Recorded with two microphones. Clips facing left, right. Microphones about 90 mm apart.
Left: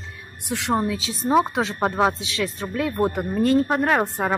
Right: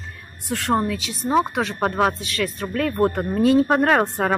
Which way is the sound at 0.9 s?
30° left (ahead or behind).